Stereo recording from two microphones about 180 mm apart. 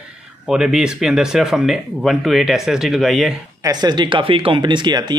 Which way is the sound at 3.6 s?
25° right (ahead or behind).